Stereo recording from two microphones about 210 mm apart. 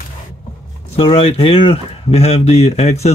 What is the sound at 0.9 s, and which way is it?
Speech, 25° left (ahead or behind).